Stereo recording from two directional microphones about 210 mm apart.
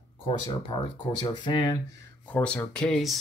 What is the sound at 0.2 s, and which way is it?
Speech, 20° left (ahead or behind).